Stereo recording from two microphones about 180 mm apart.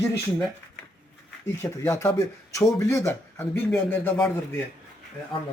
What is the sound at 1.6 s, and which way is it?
Speech, 15° left (ahead or behind).